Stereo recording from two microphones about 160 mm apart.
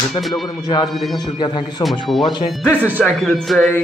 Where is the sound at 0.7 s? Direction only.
30° left (ahead or behind).